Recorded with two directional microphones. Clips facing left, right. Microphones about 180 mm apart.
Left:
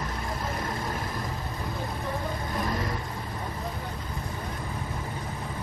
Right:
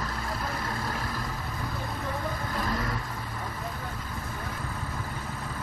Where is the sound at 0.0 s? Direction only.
20° left (ahead or behind).